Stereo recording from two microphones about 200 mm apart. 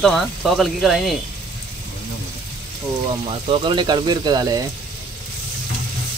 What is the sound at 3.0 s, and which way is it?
Speech, 25° right (ahead or behind).